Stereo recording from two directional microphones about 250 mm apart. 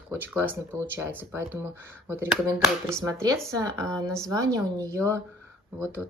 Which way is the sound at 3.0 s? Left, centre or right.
Centre.